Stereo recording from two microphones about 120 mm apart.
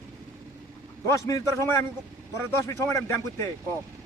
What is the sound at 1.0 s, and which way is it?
Speech, 25° left (ahead or behind).